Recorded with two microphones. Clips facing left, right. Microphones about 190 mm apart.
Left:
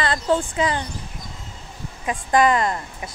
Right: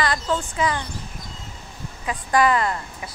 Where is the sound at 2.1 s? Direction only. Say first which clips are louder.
Left 2 dB; 20° left (ahead or behind).